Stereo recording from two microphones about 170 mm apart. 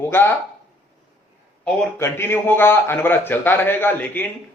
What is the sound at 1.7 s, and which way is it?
A man's voice, 5° left (ahead or behind).